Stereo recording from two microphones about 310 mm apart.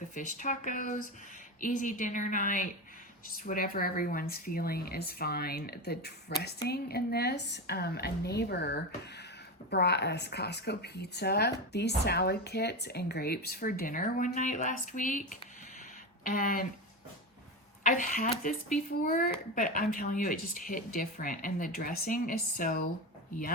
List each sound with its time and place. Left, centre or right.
0.1 s speech: left
17.9 s speech: left